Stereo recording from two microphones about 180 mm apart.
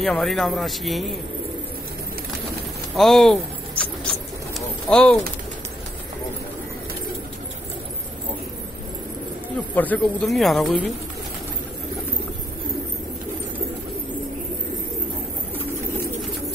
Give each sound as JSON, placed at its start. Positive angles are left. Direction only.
{"t": 0.0, "sound": "speech", "side_deg": 0}
{"t": 3.0, "sound": "speech", "side_deg": 0}
{"t": 4.6, "sound": "bird", "side_deg": 5}
{"t": 9.8, "sound": "speech", "side_deg": 5}